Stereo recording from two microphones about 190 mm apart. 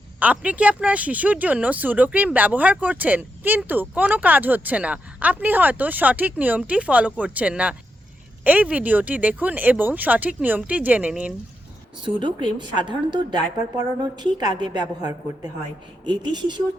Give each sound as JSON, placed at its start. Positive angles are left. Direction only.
{"t": 0.2, "sound": "speech", "side_deg": -10}
{"t": 12.0, "sound": "a woman's voice", "side_deg": -25}